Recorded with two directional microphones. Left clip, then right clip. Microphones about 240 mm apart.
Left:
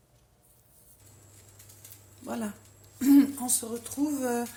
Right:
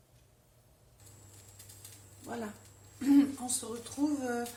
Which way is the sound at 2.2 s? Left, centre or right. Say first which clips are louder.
Left 5 dB; left.